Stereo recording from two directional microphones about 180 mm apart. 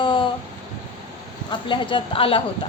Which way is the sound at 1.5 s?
30° left (ahead or behind).